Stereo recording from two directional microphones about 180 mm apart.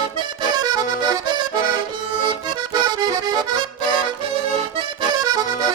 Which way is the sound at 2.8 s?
20° right (ahead or behind).